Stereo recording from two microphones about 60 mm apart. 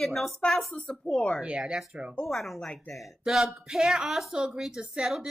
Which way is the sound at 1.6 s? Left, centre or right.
Centre.